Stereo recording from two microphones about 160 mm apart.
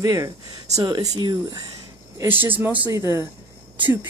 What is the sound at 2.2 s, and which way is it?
Speech, 10° right (ahead or behind).